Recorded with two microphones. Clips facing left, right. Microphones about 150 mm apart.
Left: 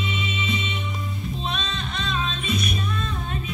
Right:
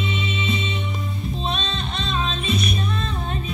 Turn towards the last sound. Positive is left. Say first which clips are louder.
# right 2 dB
turn(degrees=-30)  # may be behind; listen again after turning